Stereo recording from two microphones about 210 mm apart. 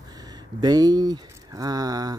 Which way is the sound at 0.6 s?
20° right (ahead or behind).